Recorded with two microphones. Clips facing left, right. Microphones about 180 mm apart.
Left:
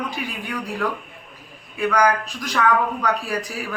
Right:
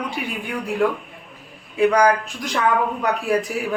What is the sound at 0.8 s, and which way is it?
Speech, 25° right (ahead or behind).